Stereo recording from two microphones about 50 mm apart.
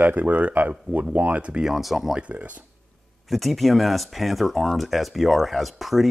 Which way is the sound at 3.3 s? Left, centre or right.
Centre.